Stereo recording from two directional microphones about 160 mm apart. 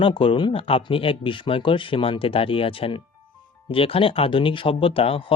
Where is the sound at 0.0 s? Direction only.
35° left (ahead or behind).